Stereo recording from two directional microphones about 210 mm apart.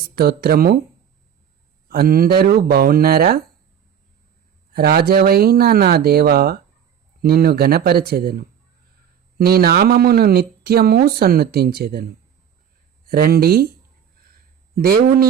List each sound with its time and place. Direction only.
0.2 s speech: 45° right (ahead or behind)
1.9 s speech: 45° right (ahead or behind)
4.7 s speech: 45° right (ahead or behind)
14.8 s speech: 45° right (ahead or behind)